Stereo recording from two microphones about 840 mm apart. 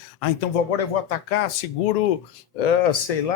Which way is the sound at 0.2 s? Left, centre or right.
Left.